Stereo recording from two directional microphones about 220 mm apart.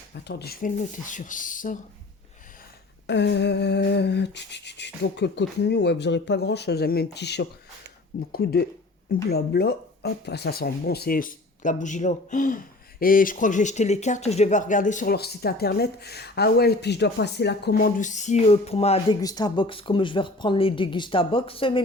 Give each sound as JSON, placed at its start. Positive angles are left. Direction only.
{"t": 0.1, "sound": "speech", "side_deg": 50}
{"t": 3.1, "sound": "a sound", "side_deg": 50}
{"t": 9.3, "sound": "speech", "side_deg": 45}
{"t": 19.2, "sound": "speech", "side_deg": 15}